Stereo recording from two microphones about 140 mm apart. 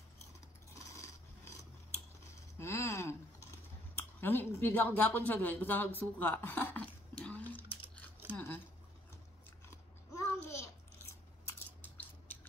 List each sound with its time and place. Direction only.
1.4 s scissors: 20° left (ahead or behind)
2.6 s a sound: 20° left (ahead or behind)
3.9 s speech: 15° left (ahead or behind)
8.3 s scissors: 10° left (ahead or behind)
10.1 s babbling: 20° left (ahead or behind)